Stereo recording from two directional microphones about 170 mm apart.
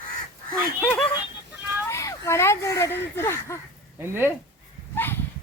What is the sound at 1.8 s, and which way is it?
Speech, 15° left (ahead or behind).